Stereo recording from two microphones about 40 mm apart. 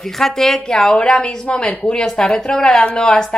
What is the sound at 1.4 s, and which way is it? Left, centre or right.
A woman's voice, left.